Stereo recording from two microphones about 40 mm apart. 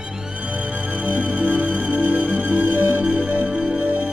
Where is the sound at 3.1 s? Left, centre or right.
Right.